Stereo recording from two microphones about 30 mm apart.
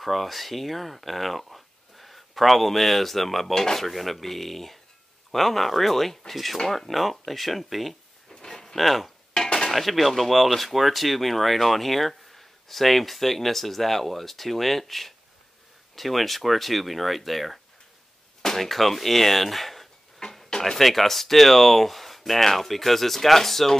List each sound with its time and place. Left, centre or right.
0.0 s speech: centre
8.3 s a sound: centre
8.7 s speech: centre
9.3 s dishes: centre
9.7 s speech: centre
18.4 s a sound: centre
18.7 s speech: centre
20.4 s a sound: left
20.7 s speech: centre